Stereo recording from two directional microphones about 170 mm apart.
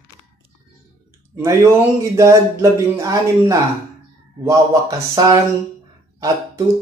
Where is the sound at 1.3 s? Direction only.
15° right (ahead or behind).